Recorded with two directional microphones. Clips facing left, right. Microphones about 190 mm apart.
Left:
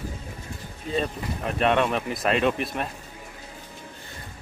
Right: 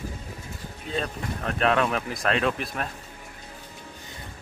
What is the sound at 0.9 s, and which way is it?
Speech, 5° left (ahead or behind).